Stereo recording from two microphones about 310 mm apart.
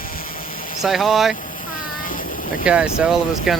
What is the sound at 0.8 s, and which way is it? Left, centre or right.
Speech, centre.